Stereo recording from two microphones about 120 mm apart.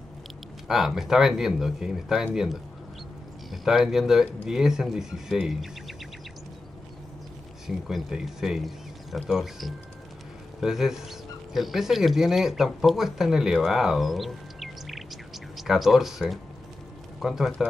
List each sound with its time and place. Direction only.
0.7 s speech: 5° right (ahead or behind)
7.6 s speech: 5° right (ahead or behind)